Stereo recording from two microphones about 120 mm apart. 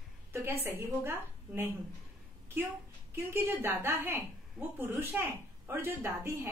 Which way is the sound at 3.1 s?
20° right (ahead or behind).